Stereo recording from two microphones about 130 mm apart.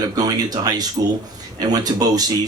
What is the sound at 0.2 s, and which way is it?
Speech, 30° right (ahead or behind).